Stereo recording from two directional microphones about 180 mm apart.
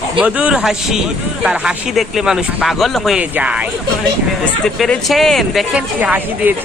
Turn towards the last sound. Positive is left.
turn(degrees=-10)  # may be behind; listen again after turning